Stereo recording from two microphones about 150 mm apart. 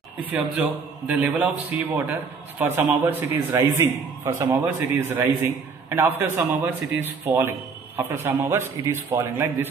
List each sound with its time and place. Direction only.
0.2 s a man's voice: 10° right (ahead or behind)